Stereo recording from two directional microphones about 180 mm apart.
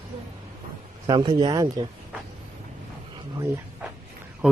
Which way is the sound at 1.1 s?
25° right (ahead or behind).